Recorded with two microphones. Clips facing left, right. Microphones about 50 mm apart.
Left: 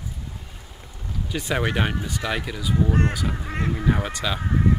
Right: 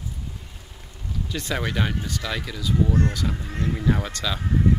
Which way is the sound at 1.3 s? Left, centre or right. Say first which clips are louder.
Left 3 dB; centre.